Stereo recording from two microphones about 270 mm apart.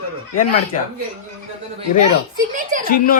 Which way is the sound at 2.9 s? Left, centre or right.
Left.